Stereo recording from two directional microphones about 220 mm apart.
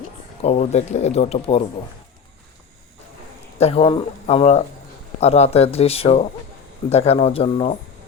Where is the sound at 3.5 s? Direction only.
25° left (ahead or behind).